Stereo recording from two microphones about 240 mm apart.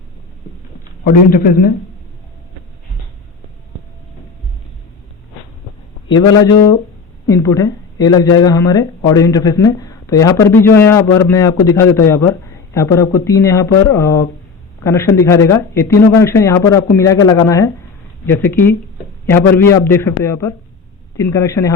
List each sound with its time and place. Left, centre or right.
1.0 s a man's voice: left
6.1 s speech: centre